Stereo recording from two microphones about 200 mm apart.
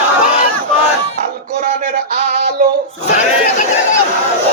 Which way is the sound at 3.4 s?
40° left (ahead or behind).